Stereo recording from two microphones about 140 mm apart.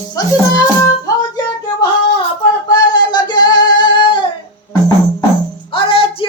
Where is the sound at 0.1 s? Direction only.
25° left (ahead or behind).